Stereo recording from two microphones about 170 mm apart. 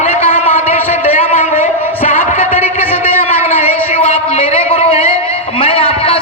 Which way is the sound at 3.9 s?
35° left (ahead or behind).